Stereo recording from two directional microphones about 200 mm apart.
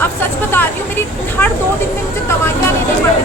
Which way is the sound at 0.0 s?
10° left (ahead or behind).